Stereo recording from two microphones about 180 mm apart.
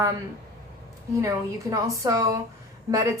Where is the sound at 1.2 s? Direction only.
15° right (ahead or behind).